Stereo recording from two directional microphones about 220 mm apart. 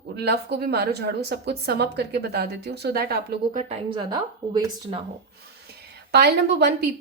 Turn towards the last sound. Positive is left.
turn(degrees=-50)  # may be behind; listen again after turning